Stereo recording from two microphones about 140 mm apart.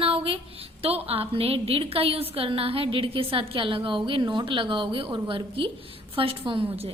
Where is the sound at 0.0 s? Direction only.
40° right (ahead or behind).